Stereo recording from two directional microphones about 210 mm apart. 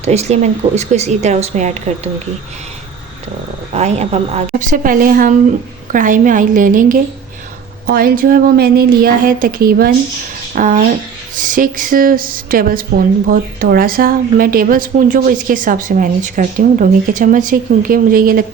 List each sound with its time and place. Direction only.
0.0 s a woman's voice: 30° right (ahead or behind)
3.8 s a woman's voice: 30° right (ahead or behind)